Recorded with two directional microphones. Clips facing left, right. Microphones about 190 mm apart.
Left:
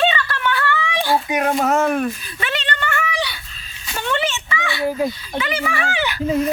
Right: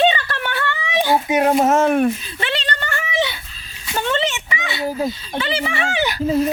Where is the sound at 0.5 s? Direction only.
20° right (ahead or behind).